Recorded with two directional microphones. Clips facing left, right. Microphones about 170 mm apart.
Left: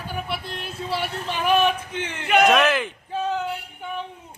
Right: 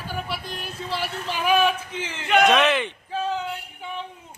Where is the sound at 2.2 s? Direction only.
5° left (ahead or behind).